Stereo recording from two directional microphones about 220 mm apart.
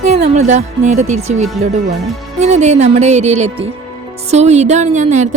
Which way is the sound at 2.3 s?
30° right (ahead or behind).